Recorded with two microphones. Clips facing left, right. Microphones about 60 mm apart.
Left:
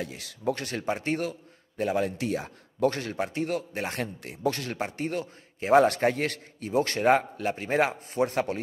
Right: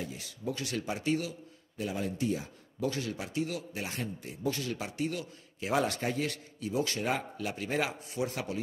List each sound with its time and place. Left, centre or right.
0.0 s a man's voice: left
2.0 s speech: left
4.7 s a man's voice: left